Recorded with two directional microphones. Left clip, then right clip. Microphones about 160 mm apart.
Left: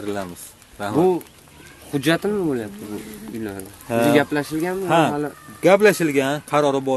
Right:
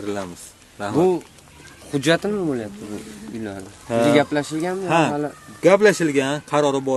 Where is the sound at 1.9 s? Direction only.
15° right (ahead or behind).